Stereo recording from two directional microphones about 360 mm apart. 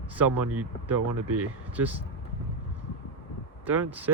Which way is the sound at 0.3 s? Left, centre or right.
Right.